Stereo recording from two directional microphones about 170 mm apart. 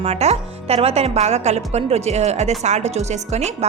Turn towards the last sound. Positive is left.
turn(degrees=-40)  # may be behind; listen again after turning